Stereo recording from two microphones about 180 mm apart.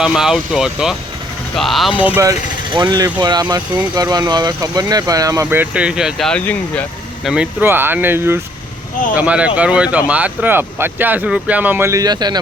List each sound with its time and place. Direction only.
0.0 s speech: centre (ahead or behind)
2.0 s speech: 10° right (ahead or behind)
2.7 s speech: 20° right (ahead or behind); by 6.8 s 10° left (ahead or behind)
7.3 s speech: 10° right (ahead or behind)